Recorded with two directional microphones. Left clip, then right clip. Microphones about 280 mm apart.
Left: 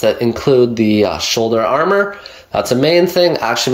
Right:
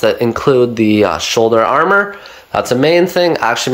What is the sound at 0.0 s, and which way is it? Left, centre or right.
Speech, centre.